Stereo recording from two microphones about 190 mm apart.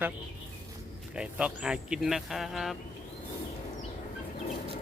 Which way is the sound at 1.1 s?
5° right (ahead or behind).